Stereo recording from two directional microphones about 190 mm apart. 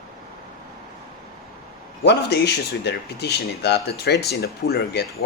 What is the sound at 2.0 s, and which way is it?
Speech, 60° left (ahead or behind).